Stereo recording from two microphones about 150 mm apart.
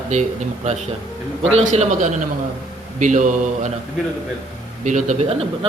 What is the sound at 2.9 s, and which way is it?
Mantra, 55° right (ahead or behind).